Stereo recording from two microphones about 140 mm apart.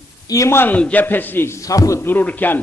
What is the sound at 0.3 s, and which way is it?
A man's voice, 20° left (ahead or behind).